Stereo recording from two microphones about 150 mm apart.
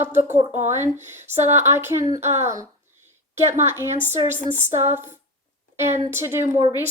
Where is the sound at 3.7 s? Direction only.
15° right (ahead or behind).